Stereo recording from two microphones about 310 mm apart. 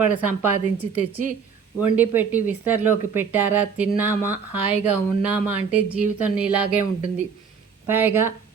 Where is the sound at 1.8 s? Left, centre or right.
Centre.